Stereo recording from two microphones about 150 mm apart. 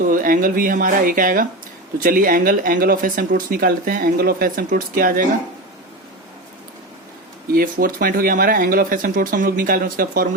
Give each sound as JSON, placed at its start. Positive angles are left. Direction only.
{"t": 0.0, "sound": "speech", "side_deg": -65}
{"t": 7.5, "sound": "speech", "side_deg": -70}